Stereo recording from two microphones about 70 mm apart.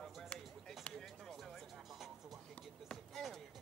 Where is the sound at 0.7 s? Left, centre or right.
Centre.